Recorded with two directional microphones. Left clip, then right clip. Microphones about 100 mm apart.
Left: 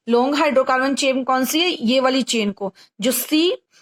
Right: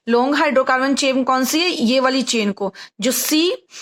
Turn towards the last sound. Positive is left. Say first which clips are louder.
# right 1 dB
turn(degrees=-40)  # may be behind; listen again after turning